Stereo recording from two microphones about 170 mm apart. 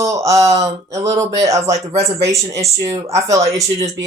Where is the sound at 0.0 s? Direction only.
20° right (ahead or behind).